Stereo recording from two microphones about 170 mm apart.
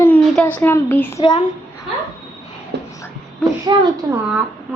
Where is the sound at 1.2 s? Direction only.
30° left (ahead or behind).